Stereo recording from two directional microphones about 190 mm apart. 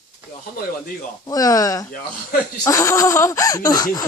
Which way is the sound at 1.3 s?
20° left (ahead or behind).